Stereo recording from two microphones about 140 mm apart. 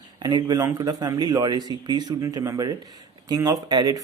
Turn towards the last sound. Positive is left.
turn(degrees=-30)  # may be behind; listen again after turning